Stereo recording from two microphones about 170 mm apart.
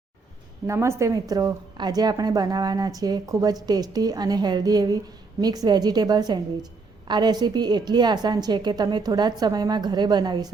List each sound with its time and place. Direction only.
0.7 s a woman's voice: 15° right (ahead or behind)